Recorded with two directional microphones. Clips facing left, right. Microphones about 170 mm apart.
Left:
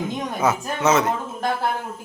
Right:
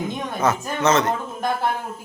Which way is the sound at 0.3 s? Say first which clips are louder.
Right 1 dB; 10° left (ahead or behind).